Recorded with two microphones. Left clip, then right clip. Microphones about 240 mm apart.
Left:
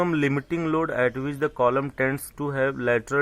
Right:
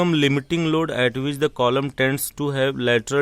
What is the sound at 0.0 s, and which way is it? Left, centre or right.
Speech, right.